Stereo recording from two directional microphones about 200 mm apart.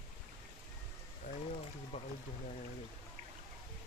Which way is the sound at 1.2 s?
35° left (ahead or behind).